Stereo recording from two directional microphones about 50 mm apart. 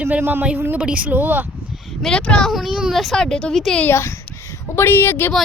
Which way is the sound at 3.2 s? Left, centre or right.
Centre.